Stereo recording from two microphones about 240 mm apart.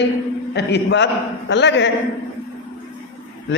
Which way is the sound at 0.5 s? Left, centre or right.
Left.